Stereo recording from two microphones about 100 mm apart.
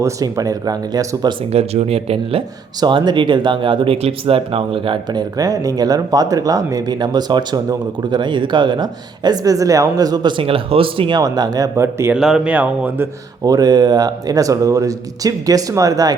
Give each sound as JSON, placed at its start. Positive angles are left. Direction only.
{"t": 0.0, "sound": "speech", "side_deg": -35}
{"t": 1.5, "sound": "speech", "side_deg": -90}
{"t": 2.8, "sound": "speech", "side_deg": -45}
{"t": 5.1, "sound": "speech", "side_deg": -35}
{"t": 10.3, "sound": "speech", "side_deg": -65}
{"t": 11.2, "sound": "speech", "side_deg": -40}
{"t": 11.8, "sound": "a man's voice", "side_deg": -25}
{"t": 12.1, "sound": "speech", "side_deg": -5}
{"t": 13.4, "sound": "speech", "side_deg": -40}